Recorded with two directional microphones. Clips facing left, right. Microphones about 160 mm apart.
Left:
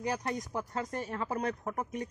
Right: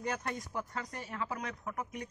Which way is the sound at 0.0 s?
35° left (ahead or behind).